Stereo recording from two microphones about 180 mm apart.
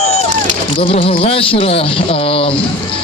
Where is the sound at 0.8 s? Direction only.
30° left (ahead or behind).